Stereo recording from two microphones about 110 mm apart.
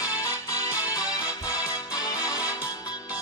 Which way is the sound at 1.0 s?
10° right (ahead or behind).